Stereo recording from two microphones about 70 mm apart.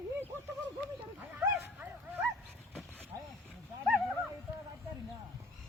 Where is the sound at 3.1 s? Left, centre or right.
Right.